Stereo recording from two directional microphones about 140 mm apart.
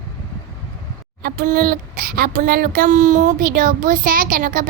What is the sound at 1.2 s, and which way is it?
Speech, 90° right.